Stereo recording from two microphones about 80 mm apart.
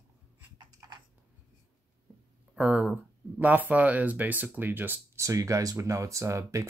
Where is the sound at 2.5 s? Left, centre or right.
Centre.